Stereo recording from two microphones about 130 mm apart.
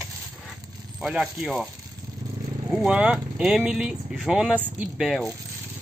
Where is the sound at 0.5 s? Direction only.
5° right (ahead or behind).